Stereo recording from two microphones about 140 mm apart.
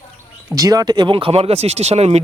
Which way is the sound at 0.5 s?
25° right (ahead or behind).